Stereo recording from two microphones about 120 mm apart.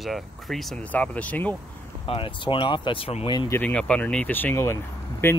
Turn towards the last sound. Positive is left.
turn(degrees=20)  # may be behind; listen again after turning